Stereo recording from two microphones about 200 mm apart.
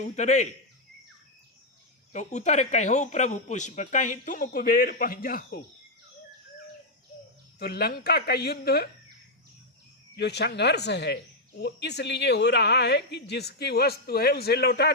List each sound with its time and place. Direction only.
0.0 s speech: 35° left (ahead or behind)
2.1 s speech: 35° left (ahead or behind)
7.6 s speech: 50° left (ahead or behind)
10.2 s speech: 55° left (ahead or behind)